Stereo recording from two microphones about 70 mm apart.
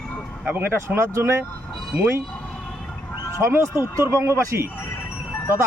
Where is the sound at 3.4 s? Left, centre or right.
Right.